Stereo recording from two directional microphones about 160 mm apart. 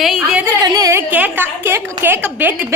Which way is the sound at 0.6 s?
20° right (ahead or behind).